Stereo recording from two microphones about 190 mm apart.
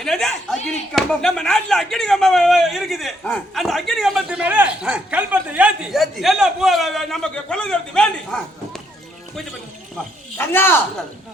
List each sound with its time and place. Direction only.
0.0 s speech: centre (ahead or behind)
10.3 s speech: 10° left (ahead or behind)